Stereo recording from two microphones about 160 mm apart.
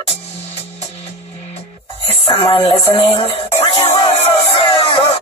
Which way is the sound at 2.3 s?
35° left (ahead or behind).